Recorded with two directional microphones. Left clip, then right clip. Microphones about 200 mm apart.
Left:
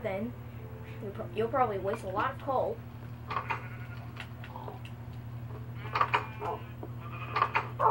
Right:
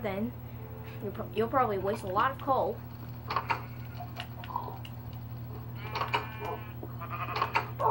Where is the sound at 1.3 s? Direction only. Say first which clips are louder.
Right 1 dB; 40° right (ahead or behind).